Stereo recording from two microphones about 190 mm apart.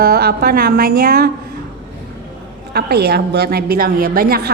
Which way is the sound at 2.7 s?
55° right (ahead or behind).